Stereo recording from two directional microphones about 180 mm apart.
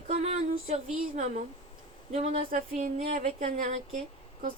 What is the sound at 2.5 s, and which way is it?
Speech, 50° right (ahead or behind).